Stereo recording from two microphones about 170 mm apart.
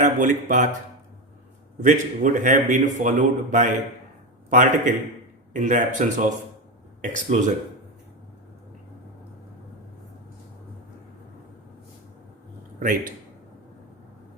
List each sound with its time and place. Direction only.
0.0 s speech: 50° right (ahead or behind)
1.8 s a man's voice: 50° right (ahead or behind)